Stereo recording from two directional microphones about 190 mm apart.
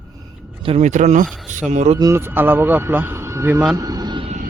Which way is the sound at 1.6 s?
40° right (ahead or behind).